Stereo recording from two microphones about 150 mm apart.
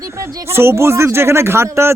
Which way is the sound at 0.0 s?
20° right (ahead or behind).